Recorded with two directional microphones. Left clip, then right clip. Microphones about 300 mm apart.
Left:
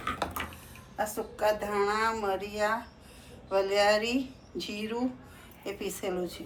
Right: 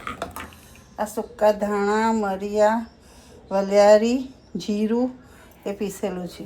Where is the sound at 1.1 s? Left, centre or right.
Right.